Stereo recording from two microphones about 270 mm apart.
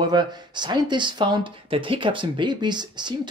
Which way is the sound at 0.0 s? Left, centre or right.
Centre.